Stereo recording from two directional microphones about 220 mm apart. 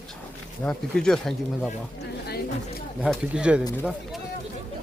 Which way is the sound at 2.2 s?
45° left (ahead or behind).